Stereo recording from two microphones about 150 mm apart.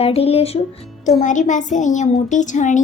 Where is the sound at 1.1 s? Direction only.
55° left (ahead or behind).